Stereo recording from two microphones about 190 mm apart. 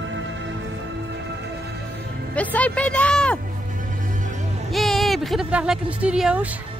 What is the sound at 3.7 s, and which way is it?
Music, 45° right (ahead or behind).